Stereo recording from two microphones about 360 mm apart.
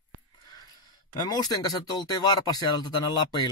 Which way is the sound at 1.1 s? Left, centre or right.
Centre.